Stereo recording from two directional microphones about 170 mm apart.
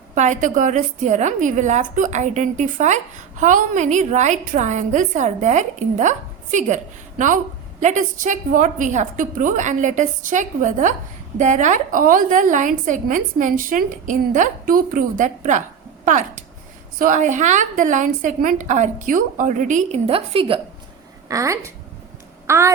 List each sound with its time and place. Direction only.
0.1 s a woman's voice: 45° right (ahead or behind)
21.2 s a woman's voice: 20° right (ahead or behind)